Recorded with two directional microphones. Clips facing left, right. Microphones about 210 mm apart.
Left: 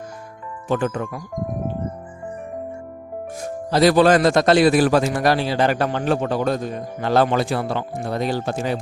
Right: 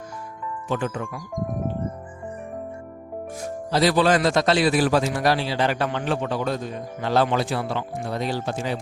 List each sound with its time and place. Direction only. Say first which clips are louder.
0.7 s a man's voice: left 5 dB; 45° left (ahead or behind)
3.7 s a man's voice: left 5 dB; 50° left (ahead or behind)